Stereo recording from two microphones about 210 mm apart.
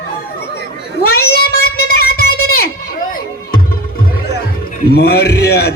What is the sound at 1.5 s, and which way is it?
Child singing, 45° left (ahead or behind).